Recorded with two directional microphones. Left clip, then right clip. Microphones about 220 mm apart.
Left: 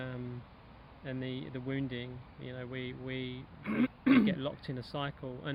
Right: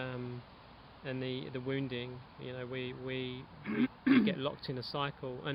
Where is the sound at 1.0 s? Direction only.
15° right (ahead or behind).